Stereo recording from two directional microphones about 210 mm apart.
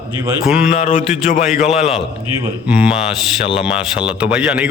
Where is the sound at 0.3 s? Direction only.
5° right (ahead or behind).